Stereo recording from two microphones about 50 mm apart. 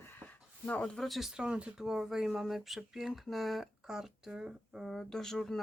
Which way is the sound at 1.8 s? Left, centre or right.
Centre.